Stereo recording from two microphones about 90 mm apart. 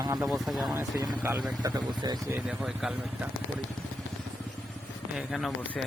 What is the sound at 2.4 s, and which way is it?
Speech, 10° right (ahead or behind).